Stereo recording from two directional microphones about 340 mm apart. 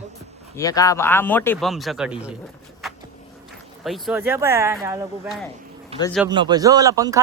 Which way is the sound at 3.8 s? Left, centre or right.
Centre.